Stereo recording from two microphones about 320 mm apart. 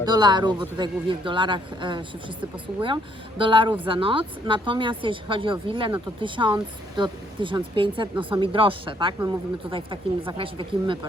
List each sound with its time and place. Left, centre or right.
0.0 s speech: centre